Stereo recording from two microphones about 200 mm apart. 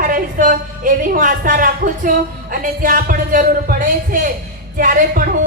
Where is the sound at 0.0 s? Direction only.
45° right (ahead or behind).